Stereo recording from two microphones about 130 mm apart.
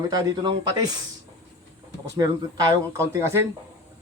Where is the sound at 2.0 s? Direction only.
25° right (ahead or behind).